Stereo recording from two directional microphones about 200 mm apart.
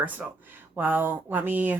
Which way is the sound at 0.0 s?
10° right (ahead or behind).